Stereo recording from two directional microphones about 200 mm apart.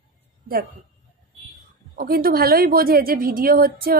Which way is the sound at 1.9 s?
50° right (ahead or behind).